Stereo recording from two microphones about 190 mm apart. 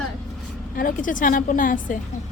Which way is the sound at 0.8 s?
45° left (ahead or behind).